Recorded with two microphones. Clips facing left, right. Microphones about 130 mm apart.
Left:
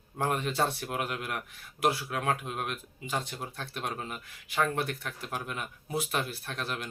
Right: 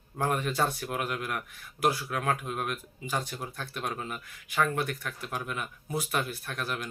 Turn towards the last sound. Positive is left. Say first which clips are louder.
# right 1 dB
turn(degrees=30)  # may be behind; listen again after turning